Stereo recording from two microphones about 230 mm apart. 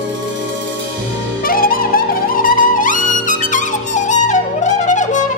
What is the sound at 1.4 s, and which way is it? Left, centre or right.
Music, left.